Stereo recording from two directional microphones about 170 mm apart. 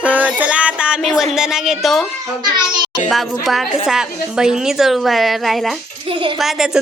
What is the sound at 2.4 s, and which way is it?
Speech, 25° right (ahead or behind).